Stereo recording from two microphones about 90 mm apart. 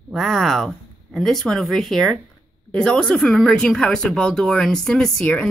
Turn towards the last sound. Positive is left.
turn(degrees=10)  # may be behind; listen again after turning